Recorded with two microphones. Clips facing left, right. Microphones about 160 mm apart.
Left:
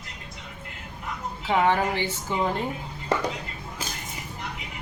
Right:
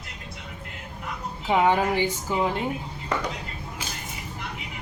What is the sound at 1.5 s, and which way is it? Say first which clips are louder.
A woman's voice: right 1 dB; 15° right (ahead or behind).